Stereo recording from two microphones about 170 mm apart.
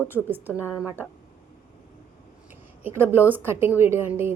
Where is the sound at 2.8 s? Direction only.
10° right (ahead or behind).